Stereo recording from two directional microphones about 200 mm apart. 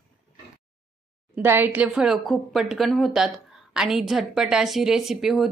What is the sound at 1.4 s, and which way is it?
Speech, 10° right (ahead or behind).